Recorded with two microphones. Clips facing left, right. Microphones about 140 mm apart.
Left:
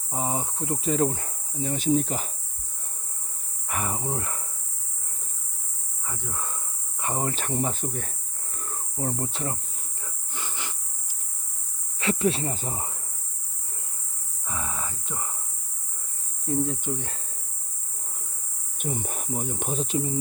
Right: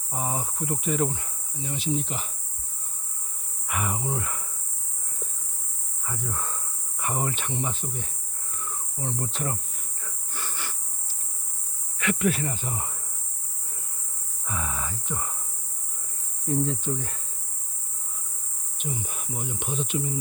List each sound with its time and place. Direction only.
0.1 s speech: 20° left (ahead or behind); by 2.3 s 40° left (ahead or behind)
3.7 s speech: 30° left (ahead or behind)
6.1 s speech: 15° left (ahead or behind)
7.0 s speech: 30° left (ahead or behind); by 8.1 s 45° left (ahead or behind)
8.5 s cricket: 45° left (ahead or behind)
9.2 s speech: 25° left (ahead or behind)
10.0 s a sound: 20° left (ahead or behind)
11.9 s speech: 30° left (ahead or behind)
14.4 s cricket: 25° left (ahead or behind)
16.6 s speech: 15° left (ahead or behind)
18.8 s speech: 50° left (ahead or behind)